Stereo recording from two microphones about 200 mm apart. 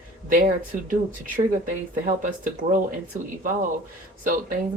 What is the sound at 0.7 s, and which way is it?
Speech, 40° right (ahead or behind).